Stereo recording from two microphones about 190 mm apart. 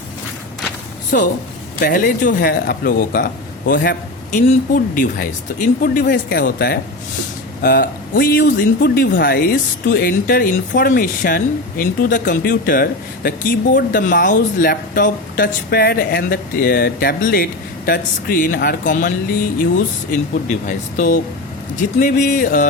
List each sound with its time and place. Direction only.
1.1 s speech: 50° left (ahead or behind)
20.7 s speech: 45° left (ahead or behind)